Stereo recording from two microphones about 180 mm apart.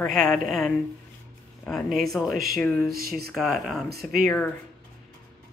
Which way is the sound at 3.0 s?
60° right (ahead or behind).